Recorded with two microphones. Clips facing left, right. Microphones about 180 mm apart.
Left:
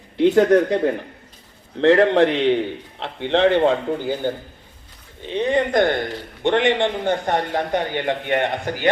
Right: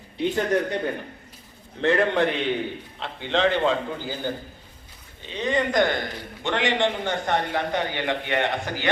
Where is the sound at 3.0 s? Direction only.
60° left (ahead or behind).